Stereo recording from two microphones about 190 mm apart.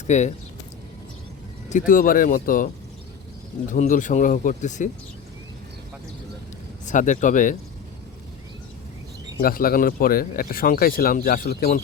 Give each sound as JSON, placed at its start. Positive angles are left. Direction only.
{"t": 0.1, "sound": "speech", "side_deg": 40}
{"t": 1.9, "sound": "speech", "side_deg": 45}
{"t": 3.7, "sound": "speech", "side_deg": 45}
{"t": 6.8, "sound": "speech", "side_deg": 40}
{"t": 9.4, "sound": "speech", "side_deg": 50}